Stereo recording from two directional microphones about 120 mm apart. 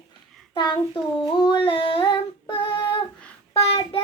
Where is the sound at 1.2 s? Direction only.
45° left (ahead or behind).